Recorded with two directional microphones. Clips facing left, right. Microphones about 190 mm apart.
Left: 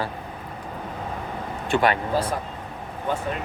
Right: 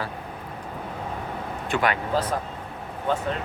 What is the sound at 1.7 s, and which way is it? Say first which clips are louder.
Speech: left 3 dB; 30° left (ahead or behind).